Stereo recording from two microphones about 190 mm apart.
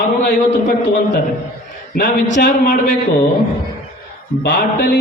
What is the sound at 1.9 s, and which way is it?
Speech, 40° left (ahead or behind).